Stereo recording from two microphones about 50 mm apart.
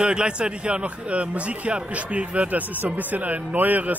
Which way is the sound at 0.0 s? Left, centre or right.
Right.